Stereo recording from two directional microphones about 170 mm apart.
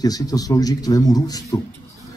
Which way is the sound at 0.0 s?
20° left (ahead or behind).